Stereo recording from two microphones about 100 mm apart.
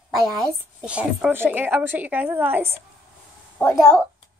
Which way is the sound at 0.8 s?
10° right (ahead or behind).